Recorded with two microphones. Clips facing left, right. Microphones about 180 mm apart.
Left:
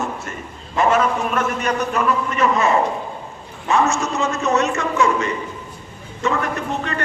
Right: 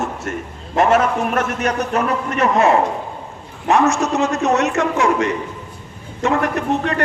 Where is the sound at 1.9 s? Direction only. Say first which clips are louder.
Right 1 dB; 55° right (ahead or behind).